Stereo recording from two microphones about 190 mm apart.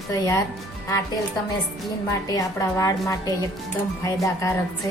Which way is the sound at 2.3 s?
15° left (ahead or behind).